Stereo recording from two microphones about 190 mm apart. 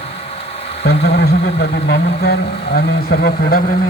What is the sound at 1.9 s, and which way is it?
Speech, 60° left (ahead or behind).